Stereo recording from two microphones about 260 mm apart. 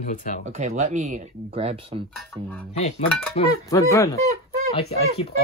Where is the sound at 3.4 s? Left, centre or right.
Centre.